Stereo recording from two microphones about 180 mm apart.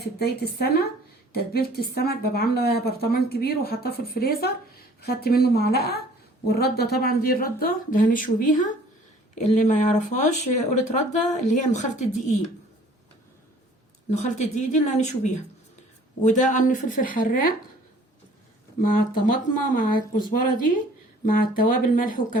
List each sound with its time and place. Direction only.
0.0 s speech: 60° left (ahead or behind); by 12.0 s 40° left (ahead or behind)
14.1 s a woman's voice: 40° left (ahead or behind)
18.8 s a woman's voice: 50° left (ahead or behind)